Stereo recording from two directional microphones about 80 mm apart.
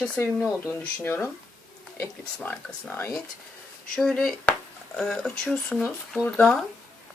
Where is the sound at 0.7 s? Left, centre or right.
Left.